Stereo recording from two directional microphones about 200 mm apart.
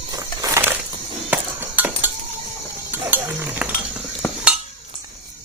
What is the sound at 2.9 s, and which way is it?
Stir, 10° right (ahead or behind).